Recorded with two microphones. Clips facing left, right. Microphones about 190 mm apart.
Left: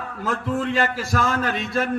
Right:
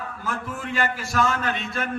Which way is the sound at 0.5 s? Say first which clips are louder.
Left 5 dB; 30° left (ahead or behind).